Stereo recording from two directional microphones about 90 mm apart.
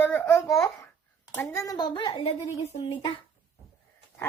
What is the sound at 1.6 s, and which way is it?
Speech, 45° left (ahead or behind).